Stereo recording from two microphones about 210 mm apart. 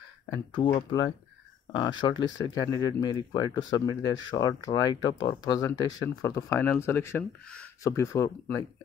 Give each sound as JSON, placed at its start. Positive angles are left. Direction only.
{"t": 0.6, "sound": "speech", "side_deg": 25}